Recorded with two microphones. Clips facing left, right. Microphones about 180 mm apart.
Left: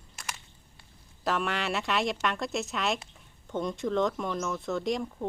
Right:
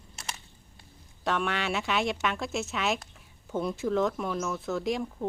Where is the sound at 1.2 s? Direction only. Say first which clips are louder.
Even; centre (ahead or behind).